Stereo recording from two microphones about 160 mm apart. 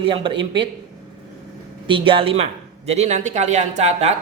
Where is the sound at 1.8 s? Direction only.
30° right (ahead or behind).